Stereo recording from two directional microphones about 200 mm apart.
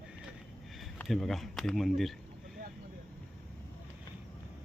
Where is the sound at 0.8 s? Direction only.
Centre (ahead or behind).